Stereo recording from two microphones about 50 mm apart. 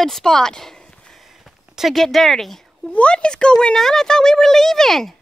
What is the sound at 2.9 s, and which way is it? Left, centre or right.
Speech, left.